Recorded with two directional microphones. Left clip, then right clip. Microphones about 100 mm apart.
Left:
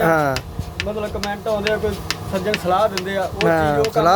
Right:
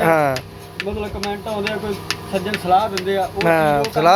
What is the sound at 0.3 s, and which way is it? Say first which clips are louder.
Speech: left 1 dB; 75° right (ahead or behind).